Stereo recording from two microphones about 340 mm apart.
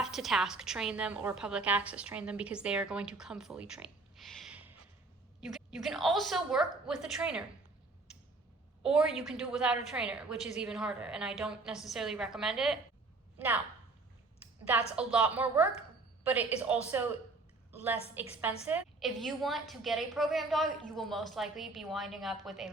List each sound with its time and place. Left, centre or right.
0.0 s a woman's voice: centre
8.8 s a woman's voice: centre
14.7 s a woman's voice: centre
17.7 s a sound: centre
18.1 s a woman's voice: centre